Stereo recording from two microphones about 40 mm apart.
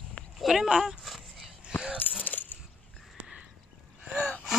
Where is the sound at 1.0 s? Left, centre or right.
Centre.